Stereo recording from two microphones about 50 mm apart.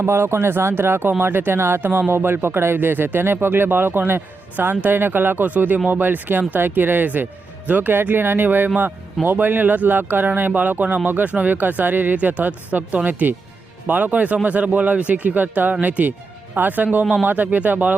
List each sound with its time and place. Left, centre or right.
0.0 s speech: right